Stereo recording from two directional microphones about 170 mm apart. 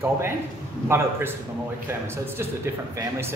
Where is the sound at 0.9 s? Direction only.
15° right (ahead or behind).